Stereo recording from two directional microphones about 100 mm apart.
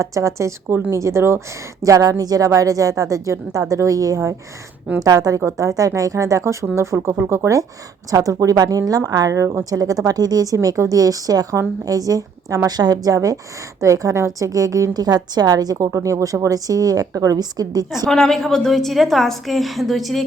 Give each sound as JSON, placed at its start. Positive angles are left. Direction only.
{"t": 0.0, "sound": "a woman's voice", "side_deg": -35}
{"t": 18.1, "sound": "a woman's voice", "side_deg": 5}